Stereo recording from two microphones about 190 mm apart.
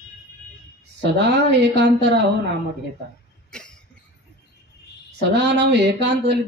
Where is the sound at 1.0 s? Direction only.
60° right (ahead or behind).